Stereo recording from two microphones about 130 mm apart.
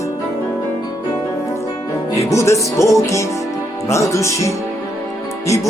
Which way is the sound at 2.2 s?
25° left (ahead or behind).